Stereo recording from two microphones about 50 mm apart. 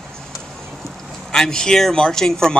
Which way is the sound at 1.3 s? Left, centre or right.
Centre.